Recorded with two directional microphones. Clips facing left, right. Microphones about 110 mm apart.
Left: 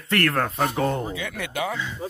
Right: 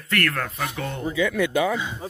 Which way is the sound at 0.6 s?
40° left (ahead or behind).